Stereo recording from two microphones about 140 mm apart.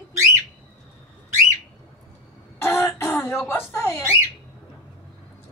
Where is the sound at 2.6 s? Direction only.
20° left (ahead or behind).